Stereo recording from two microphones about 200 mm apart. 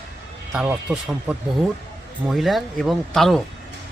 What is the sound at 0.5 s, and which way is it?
Speech, 5° right (ahead or behind).